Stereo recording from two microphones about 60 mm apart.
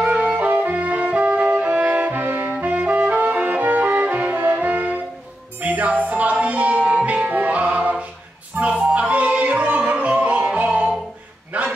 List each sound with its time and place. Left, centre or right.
0.0 s music: right
4.4 s music: right
4.6 s music: right
11.5 s dog: right